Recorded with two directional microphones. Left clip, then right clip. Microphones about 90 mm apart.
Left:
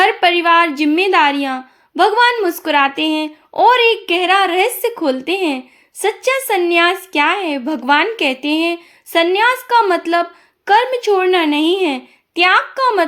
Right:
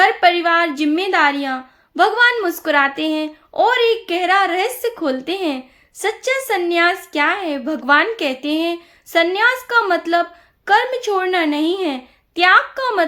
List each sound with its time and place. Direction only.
0.0 s a woman's voice: 30° left (ahead or behind)